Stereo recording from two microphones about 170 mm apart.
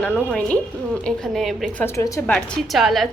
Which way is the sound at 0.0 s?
5° left (ahead or behind).